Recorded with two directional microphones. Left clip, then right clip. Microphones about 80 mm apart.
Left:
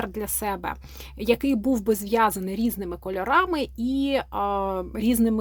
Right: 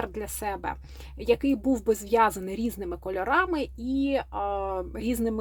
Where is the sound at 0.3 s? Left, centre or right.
Left.